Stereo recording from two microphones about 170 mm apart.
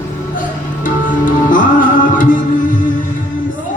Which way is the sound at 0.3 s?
50° left (ahead or behind).